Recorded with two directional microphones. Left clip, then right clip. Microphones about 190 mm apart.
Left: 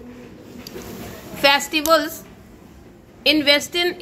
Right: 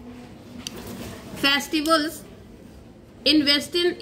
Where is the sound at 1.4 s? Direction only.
25° left (ahead or behind).